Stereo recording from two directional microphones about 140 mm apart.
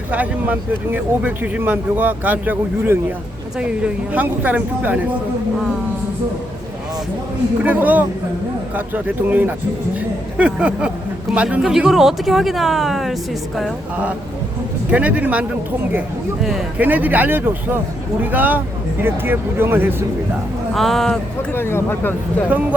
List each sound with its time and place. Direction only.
0.1 s speech: 10° right (ahead or behind)
7.6 s speech: 10° right (ahead or behind)
14.8 s speech: 10° right (ahead or behind)
20.7 s speech: centre (ahead or behind)
21.5 s speech: 15° left (ahead or behind)